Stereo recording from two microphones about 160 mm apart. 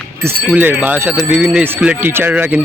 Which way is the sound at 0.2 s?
10° right (ahead or behind).